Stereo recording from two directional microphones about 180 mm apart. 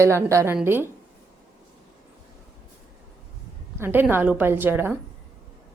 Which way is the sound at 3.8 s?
10° right (ahead or behind).